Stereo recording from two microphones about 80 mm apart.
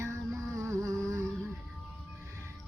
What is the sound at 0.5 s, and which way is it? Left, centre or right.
Humming, right.